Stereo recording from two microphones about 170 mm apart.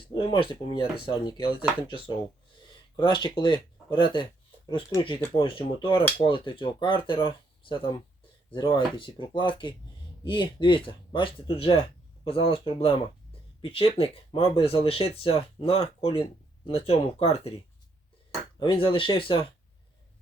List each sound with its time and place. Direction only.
0.1 s speech: 30° left (ahead or behind)
18.6 s speech: 30° left (ahead or behind)